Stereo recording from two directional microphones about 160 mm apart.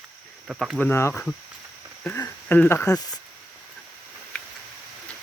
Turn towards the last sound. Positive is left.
turn(degrees=5)  # may be behind; listen again after turning